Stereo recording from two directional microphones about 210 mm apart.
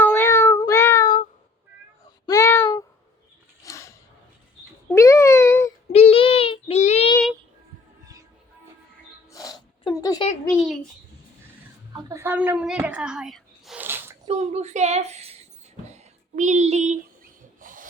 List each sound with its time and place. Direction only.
0.0 s cat: 10° left (ahead or behind)
2.2 s a sound: 15° left (ahead or behind)
4.9 s a sound: 15° left (ahead or behind)
5.9 s child singing: 30° left (ahead or behind)
9.3 s a sound: 15° left (ahead or behind)
12.0 s speech: 10° right (ahead or behind)
14.3 s a woman's voice: 30° right (ahead or behind)
15.9 s music: 35° right (ahead or behind)
17.6 s rub: 40° right (ahead or behind)